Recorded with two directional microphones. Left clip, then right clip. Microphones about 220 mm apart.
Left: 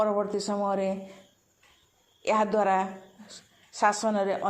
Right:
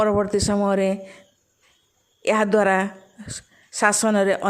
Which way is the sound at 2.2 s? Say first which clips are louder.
Right 6 dB; 40° right (ahead or behind).